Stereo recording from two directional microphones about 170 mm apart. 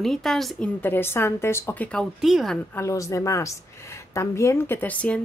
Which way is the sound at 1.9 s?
Centre (ahead or behind).